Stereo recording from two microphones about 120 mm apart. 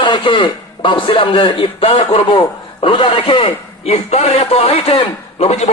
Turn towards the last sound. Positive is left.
turn(degrees=60)  # may be behind; listen again after turning